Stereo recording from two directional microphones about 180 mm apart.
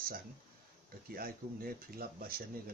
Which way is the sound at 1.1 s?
55° right (ahead or behind).